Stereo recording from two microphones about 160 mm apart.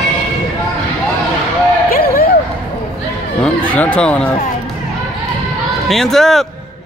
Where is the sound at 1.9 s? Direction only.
70° left (ahead or behind).